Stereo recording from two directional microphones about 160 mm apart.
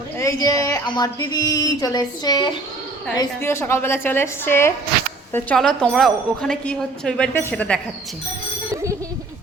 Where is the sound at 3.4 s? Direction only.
15° left (ahead or behind).